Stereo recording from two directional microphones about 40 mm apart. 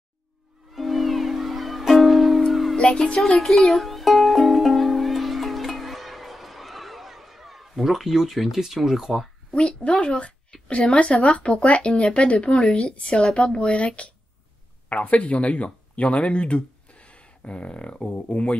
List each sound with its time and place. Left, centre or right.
0.7 s music: centre
8.5 s speech: centre
9.5 s speech: left